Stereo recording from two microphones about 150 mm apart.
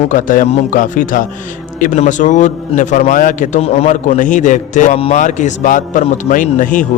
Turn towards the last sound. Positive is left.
turn(degrees=60)  # may be behind; listen again after turning